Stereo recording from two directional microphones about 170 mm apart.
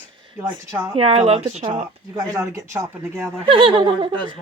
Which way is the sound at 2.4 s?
15° right (ahead or behind).